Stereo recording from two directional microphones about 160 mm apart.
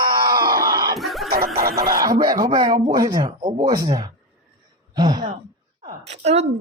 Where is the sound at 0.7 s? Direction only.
25° right (ahead or behind).